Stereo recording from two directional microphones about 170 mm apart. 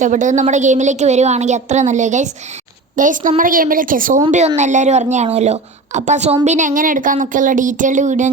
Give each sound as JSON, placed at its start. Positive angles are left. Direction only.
{"t": 0.0, "sound": "a woman's voice", "side_deg": -45}
{"t": 4.3, "sound": "a woman's voice", "side_deg": -40}